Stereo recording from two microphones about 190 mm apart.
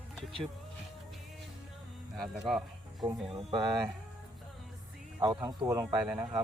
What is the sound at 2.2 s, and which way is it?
Speech, centre (ahead or behind).